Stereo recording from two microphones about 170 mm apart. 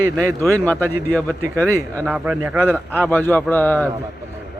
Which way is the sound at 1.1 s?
10° left (ahead or behind).